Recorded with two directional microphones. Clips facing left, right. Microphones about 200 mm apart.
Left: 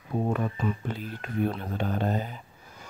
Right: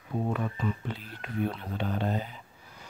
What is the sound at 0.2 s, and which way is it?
Speech, 45° left (ahead or behind).